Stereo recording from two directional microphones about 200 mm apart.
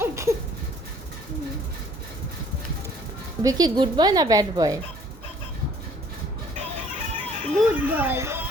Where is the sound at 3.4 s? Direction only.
20° right (ahead or behind).